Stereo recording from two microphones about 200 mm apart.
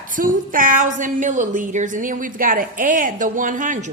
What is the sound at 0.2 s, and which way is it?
A woman's voice, 40° right (ahead or behind).